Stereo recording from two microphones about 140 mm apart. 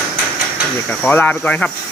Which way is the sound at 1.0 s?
10° left (ahead or behind).